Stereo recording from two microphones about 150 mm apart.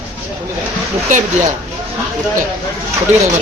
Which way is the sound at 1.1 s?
60° right (ahead or behind).